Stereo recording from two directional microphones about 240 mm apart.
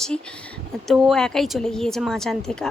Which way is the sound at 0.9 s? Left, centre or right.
Centre.